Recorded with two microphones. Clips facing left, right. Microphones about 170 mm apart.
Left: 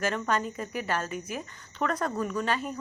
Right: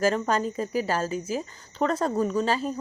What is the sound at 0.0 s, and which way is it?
A woman's voice, 35° right (ahead or behind).